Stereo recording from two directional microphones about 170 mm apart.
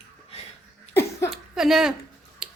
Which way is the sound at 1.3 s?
Centre (ahead or behind).